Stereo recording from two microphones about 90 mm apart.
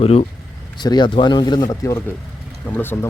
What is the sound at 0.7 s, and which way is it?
Speech, 55° left (ahead or behind).